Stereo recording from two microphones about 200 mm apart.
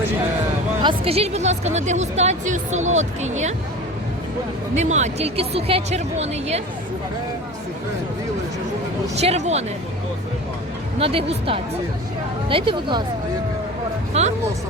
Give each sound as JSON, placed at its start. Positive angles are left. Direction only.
{"t": 0.8, "sound": "a woman's voice", "side_deg": -25}
{"t": 4.7, "sound": "a woman's voice", "side_deg": -35}
{"t": 9.2, "sound": "a woman's voice", "side_deg": -35}
{"t": 11.0, "sound": "a woman's voice", "side_deg": -30}
{"t": 14.1, "sound": "speech", "side_deg": -35}